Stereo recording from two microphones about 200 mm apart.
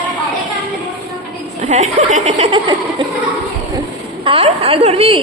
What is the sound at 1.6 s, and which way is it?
Speech, 35° right (ahead or behind).